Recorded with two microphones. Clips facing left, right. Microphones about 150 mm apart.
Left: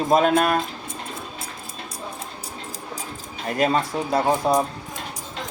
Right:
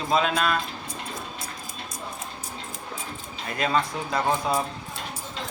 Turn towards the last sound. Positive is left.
turn(degrees=40)  # may be behind; listen again after turning